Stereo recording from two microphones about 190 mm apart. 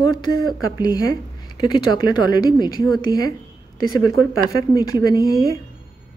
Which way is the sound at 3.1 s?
55° right (ahead or behind).